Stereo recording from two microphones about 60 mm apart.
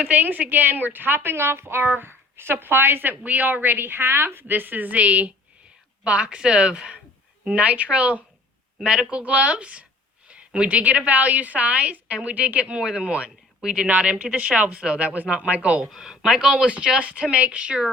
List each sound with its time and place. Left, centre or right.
0.0 s a woman's voice: right
8.8 s a woman's voice: centre
13.6 s speech: centre
13.8 s a woman's voice: right
15.8 s a woman's voice: centre